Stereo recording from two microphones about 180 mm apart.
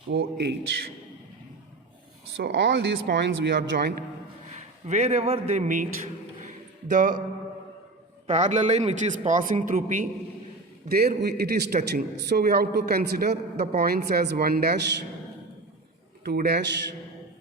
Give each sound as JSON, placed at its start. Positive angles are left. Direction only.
{"t": 0.1, "sound": "a man's voice", "side_deg": -65}
{"t": 2.3, "sound": "speech", "side_deg": -80}
{"t": 4.9, "sound": "a man's voice", "side_deg": -35}
{"t": 6.4, "sound": "a sound", "side_deg": -45}
{"t": 8.3, "sound": "a man's voice", "side_deg": -40}
{"t": 10.8, "sound": "a man's voice", "side_deg": -60}
{"t": 16.2, "sound": "a man's voice", "side_deg": -60}